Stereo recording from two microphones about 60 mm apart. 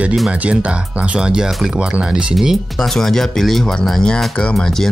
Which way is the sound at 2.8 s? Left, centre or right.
Centre.